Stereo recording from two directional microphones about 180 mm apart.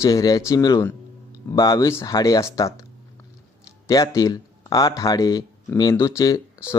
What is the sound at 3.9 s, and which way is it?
Speech, 20° left (ahead or behind).